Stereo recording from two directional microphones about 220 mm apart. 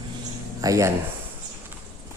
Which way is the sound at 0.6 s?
15° right (ahead or behind).